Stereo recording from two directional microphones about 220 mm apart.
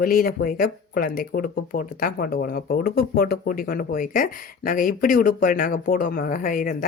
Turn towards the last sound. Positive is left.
turn(degrees=40)  # may be behind; listen again after turning